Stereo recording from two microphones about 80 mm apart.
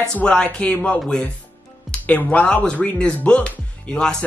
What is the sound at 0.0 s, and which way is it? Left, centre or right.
Speech, centre.